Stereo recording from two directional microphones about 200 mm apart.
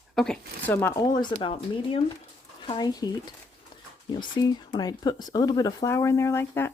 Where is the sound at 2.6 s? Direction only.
20° left (ahead or behind).